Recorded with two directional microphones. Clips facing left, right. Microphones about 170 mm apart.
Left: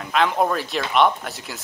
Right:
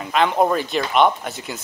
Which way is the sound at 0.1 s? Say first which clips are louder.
Right 2 dB; centre (ahead or behind).